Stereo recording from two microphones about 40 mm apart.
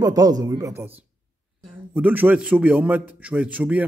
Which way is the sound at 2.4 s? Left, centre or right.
Right.